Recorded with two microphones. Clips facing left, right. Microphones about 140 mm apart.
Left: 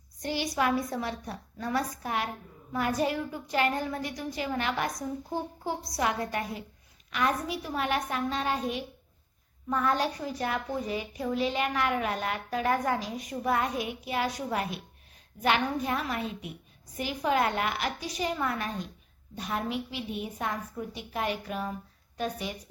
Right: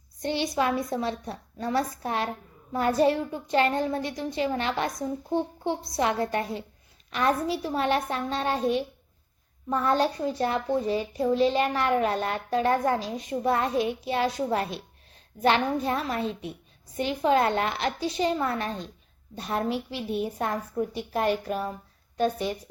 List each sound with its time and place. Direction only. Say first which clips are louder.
0.2 s a woman's voice: right 3 dB; 25° right (ahead or behind)